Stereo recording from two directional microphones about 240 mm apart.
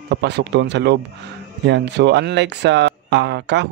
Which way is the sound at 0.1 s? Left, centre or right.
Right.